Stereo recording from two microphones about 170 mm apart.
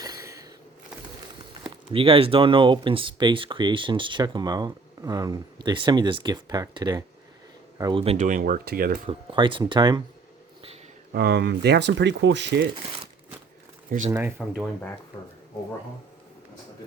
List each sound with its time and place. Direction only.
0.0 s a sound: 20° right (ahead or behind)
1.9 s a man's voice: 30° right (ahead or behind)
8.2 s speech: 55° right (ahead or behind)
9.0 s speech: 30° right (ahead or behind)
11.1 s speech: 70° right (ahead or behind); by 12.6 s 90° right
14.1 s speech: 10° right (ahead or behind)